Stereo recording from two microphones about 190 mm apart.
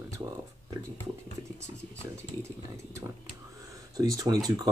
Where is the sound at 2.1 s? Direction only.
15° right (ahead or behind).